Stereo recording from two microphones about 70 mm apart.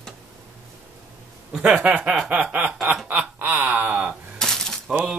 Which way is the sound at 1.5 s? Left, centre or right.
Centre.